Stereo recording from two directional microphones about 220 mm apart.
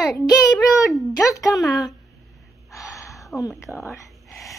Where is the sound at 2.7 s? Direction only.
15° left (ahead or behind).